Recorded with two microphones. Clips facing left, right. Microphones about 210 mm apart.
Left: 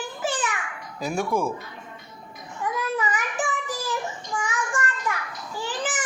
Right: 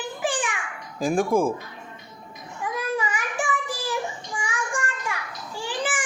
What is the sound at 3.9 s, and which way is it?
Child singing, 15° right (ahead or behind).